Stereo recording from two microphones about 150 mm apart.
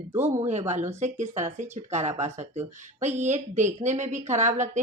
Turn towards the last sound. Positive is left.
turn(degrees=-55)  # may be behind; listen again after turning